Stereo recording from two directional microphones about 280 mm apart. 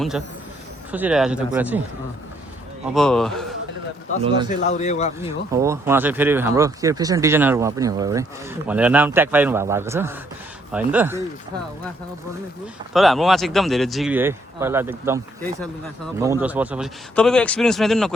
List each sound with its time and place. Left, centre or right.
0.9 s speech: centre
2.8 s speech: centre
4.4 s speech: left
5.5 s speech: centre
12.9 s speech: centre
16.2 s speech: centre